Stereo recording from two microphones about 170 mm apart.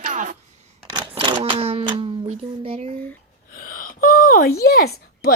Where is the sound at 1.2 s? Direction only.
30° right (ahead or behind).